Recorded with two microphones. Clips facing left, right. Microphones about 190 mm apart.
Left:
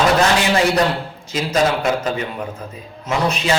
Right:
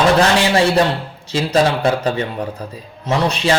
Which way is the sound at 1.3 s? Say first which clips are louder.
Right 2 dB; 30° right (ahead or behind).